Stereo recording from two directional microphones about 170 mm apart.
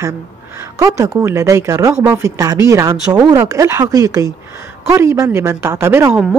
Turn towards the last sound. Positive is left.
turn(degrees=-5)  # may be behind; listen again after turning